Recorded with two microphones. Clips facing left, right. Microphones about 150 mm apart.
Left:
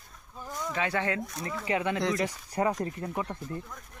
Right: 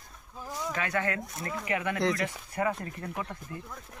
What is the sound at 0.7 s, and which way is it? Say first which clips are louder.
Speech: left 2 dB; 25° left (ahead or behind).